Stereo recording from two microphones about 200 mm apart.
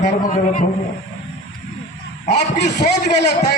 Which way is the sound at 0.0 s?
40° left (ahead or behind).